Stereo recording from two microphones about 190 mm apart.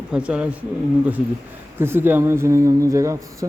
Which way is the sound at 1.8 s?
10° right (ahead or behind).